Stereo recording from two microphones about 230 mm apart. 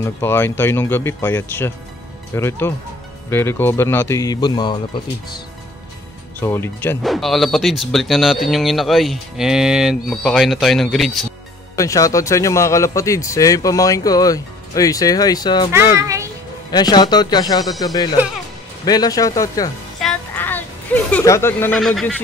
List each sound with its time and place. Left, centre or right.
0.0 s speech: centre
6.4 s speech: centre
11.7 s speech: centre
15.7 s a child's voice: centre
16.7 s speech: centre
20.0 s a sound: centre